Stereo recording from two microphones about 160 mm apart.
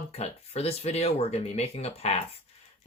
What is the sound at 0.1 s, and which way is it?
Speech, 40° left (ahead or behind).